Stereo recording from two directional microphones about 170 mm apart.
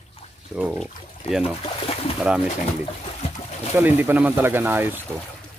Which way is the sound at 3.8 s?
10° right (ahead or behind).